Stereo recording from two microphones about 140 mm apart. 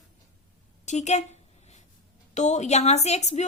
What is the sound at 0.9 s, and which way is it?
A woman's voice, 55° left (ahead or behind).